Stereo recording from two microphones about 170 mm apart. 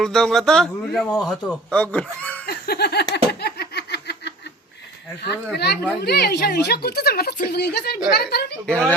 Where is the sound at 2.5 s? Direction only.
70° left (ahead or behind).